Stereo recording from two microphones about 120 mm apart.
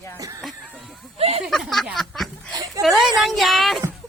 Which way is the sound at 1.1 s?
60° right (ahead or behind).